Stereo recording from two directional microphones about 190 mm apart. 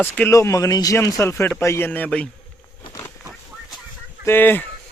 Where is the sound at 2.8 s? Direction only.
15° left (ahead or behind).